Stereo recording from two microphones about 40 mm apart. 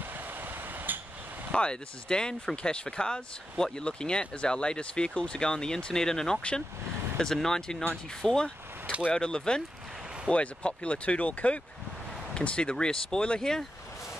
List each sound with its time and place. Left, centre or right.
0.9 s vehicle: right
1.5 s speech: left
7.4 s speech: centre
10.3 s speech: left
13.4 s speech: centre